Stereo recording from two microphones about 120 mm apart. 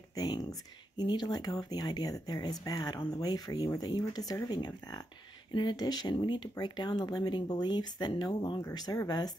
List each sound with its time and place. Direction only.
0.1 s speech: 30° left (ahead or behind)